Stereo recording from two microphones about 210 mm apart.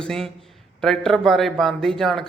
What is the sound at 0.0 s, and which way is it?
A man's voice, centre (ahead or behind).